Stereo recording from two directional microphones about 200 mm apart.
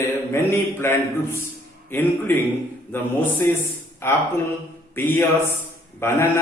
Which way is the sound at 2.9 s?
10° left (ahead or behind).